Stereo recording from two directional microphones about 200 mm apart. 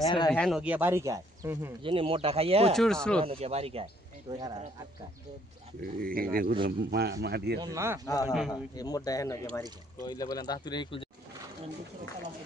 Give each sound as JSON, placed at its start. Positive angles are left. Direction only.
{"t": 0.0, "sound": "speech", "side_deg": 20}
{"t": 0.3, "sound": "speech", "side_deg": 0}
{"t": 1.8, "sound": "speech", "side_deg": -25}
{"t": 2.7, "sound": "speech", "side_deg": 0}
{"t": 3.3, "sound": "speech", "side_deg": -30}
{"t": 5.8, "sound": "a man's voice", "side_deg": -45}
{"t": 7.6, "sound": "speech", "side_deg": -15}
{"t": 8.0, "sound": "speech", "side_deg": 15}
{"t": 8.3, "sound": "speech", "side_deg": 0}
{"t": 8.7, "sound": "speech", "side_deg": 20}